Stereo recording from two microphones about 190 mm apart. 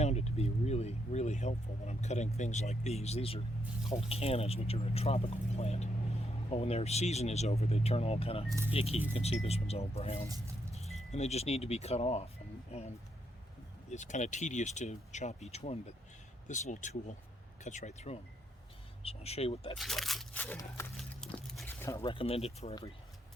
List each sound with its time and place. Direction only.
0.0 s vehicle: 35° left (ahead or behind)
3.8 s speech: 30° left (ahead or behind)
8.4 s speech: 15° right (ahead or behind)
8.7 s speech: 30° left (ahead or behind)
10.2 s speech: 20° right (ahead or behind)
11.1 s speech: 35° left (ahead or behind)
13.9 s speech: 40° left (ahead or behind)
19.7 s speech: centre (ahead or behind)
21.3 s a sound: centre (ahead or behind)
21.7 s a sound: 15° left (ahead or behind)
22.0 s speech: 30° left (ahead or behind)